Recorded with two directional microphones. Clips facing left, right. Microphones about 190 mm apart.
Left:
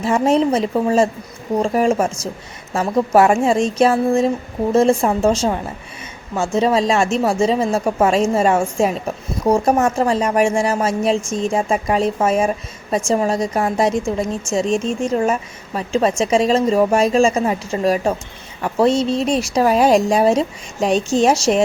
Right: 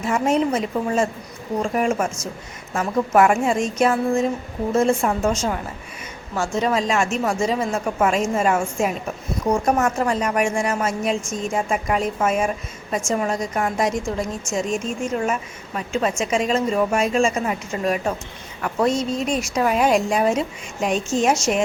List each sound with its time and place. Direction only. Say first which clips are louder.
0.0 s speech: left 4 dB; 30° left (ahead or behind)